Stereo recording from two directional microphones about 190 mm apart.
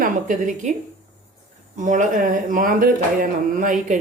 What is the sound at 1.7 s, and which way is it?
Speech, 40° right (ahead or behind).